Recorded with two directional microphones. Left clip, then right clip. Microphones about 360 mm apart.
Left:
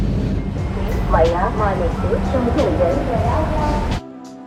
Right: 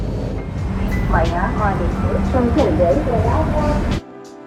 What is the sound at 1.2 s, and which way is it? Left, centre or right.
Speech, centre.